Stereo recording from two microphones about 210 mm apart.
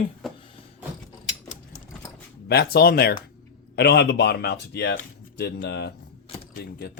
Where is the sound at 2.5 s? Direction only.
50° left (ahead or behind).